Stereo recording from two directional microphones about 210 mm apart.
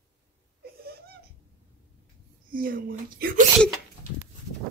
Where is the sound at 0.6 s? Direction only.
45° right (ahead or behind).